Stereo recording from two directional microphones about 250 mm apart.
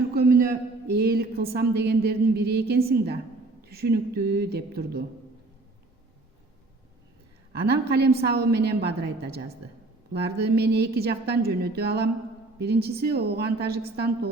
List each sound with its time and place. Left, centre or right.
0.1 s a sound: right
0.9 s a woman's voice: right
7.6 s a woman's voice: right